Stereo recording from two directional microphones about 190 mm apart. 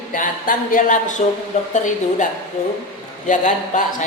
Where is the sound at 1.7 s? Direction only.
40° left (ahead or behind).